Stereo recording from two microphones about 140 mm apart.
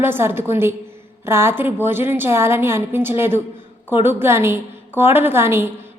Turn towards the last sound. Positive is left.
turn(degrees=-15)  # may be behind; listen again after turning